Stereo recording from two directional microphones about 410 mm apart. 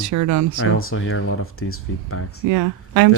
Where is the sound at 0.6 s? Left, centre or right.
Left.